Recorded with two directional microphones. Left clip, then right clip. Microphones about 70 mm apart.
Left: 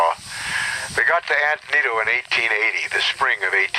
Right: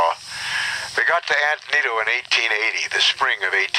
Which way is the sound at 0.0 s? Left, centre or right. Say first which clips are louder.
Even; right.